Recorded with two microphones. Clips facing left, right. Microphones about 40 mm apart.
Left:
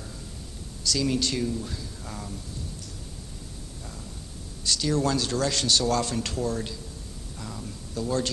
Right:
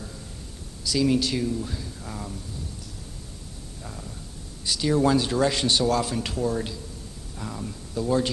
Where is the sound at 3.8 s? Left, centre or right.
Centre.